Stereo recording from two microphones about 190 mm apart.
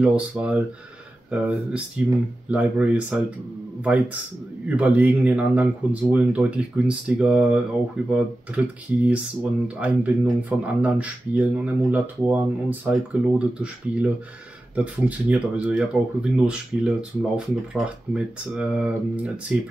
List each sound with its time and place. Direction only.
0.0 s speech: 5° right (ahead or behind)